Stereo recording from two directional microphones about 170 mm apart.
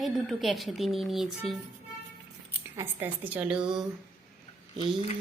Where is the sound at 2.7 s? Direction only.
15° right (ahead or behind).